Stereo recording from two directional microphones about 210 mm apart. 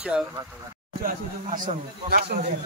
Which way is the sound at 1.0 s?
40° right (ahead or behind).